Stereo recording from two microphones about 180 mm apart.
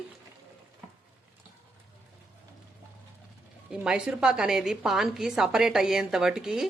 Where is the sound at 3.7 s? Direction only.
5° right (ahead or behind).